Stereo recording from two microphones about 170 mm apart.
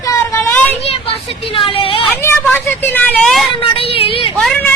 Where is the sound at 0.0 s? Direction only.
15° left (ahead or behind).